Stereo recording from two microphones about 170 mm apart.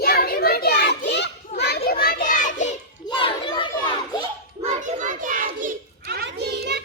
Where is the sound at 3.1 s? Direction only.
30° left (ahead or behind).